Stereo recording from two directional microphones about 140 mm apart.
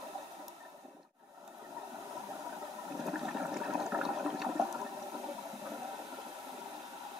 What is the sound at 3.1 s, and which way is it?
Toilet flush, 5° right (ahead or behind).